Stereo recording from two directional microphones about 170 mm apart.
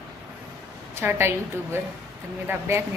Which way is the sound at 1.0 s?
15° right (ahead or behind).